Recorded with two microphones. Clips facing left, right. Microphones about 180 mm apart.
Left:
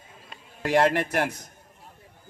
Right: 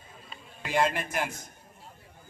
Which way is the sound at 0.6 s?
75° left (ahead or behind).